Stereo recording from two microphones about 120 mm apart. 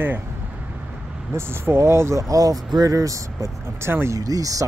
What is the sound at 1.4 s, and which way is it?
Speech, 20° right (ahead or behind).